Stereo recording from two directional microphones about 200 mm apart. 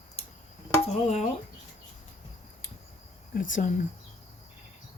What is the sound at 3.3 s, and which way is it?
Speech, 40° left (ahead or behind).